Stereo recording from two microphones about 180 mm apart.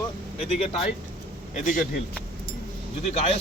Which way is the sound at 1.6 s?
50° left (ahead or behind).